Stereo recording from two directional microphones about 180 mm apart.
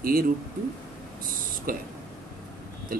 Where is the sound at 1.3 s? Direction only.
50° right (ahead or behind).